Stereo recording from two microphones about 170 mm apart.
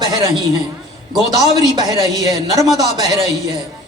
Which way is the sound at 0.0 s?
25° right (ahead or behind).